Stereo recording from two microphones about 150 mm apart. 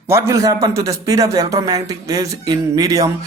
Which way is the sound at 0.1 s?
20° right (ahead or behind).